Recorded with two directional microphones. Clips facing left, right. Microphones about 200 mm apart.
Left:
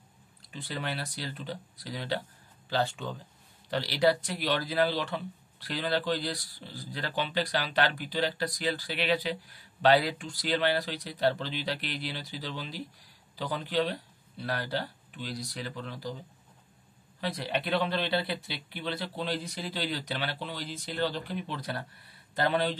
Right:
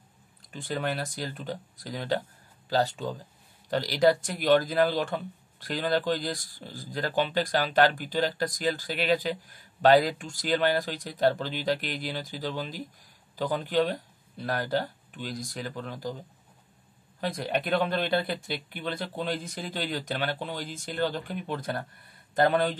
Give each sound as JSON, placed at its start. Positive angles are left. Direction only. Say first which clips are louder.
{"t": 0.5, "sound": "speech", "louder": "right 5 dB", "side_deg": -45}
{"t": 17.2, "sound": "speech", "louder": "right 3 dB", "side_deg": -45}